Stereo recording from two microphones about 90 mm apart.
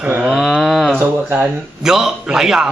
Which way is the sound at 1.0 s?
20° right (ahead or behind).